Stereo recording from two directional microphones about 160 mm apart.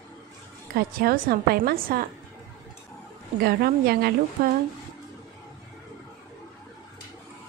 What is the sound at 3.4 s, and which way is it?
A woman's voice, 75° right (ahead or behind).